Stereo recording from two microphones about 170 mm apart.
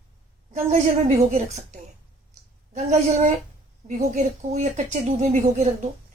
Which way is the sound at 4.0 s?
45° right (ahead or behind).